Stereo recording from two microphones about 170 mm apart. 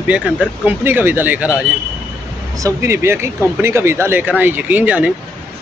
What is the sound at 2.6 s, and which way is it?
Speech, 15° right (ahead or behind).